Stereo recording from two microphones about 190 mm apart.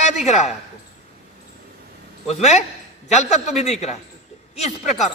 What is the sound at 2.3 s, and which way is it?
A man's voice, 35° left (ahead or behind).